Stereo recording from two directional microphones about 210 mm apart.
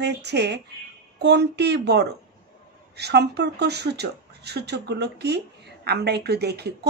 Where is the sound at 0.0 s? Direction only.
55° right (ahead or behind).